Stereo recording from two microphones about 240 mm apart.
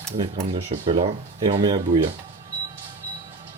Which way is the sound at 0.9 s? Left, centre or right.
Right.